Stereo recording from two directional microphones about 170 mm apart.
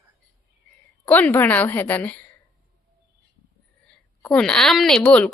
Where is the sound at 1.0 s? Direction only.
10° left (ahead or behind).